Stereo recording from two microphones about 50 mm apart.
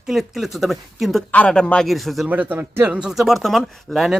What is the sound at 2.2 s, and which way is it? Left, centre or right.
Speech, right.